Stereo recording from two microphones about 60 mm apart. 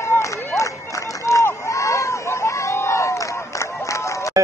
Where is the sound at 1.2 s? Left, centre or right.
Left.